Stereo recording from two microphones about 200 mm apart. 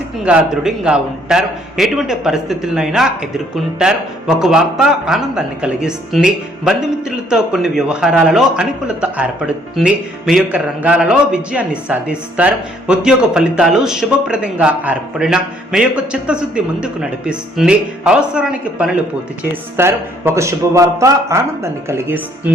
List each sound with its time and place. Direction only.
0.3 s a man's voice: 5° right (ahead or behind)